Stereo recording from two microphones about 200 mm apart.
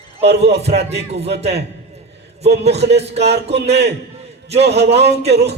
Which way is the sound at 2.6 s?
30° right (ahead or behind).